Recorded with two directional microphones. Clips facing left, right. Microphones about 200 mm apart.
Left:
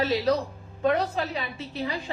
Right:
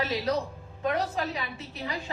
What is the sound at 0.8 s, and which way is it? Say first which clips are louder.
Speech: left 4 dB; 30° left (ahead or behind).